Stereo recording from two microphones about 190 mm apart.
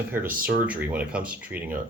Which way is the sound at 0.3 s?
50° right (ahead or behind).